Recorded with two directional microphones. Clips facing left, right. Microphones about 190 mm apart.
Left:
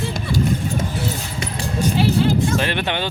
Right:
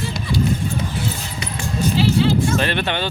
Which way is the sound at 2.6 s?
15° left (ahead or behind).